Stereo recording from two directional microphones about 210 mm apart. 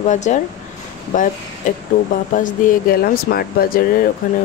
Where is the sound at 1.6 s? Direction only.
35° left (ahead or behind).